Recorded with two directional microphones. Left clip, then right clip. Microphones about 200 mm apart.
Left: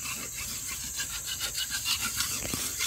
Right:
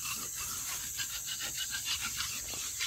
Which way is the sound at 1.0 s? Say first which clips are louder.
Left 5 dB; 55° left (ahead or behind).